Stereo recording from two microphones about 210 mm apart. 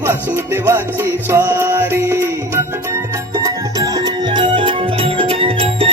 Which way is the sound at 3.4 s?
15° right (ahead or behind).